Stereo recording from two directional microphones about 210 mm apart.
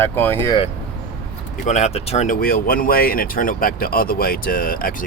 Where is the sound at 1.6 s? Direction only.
35° left (ahead or behind).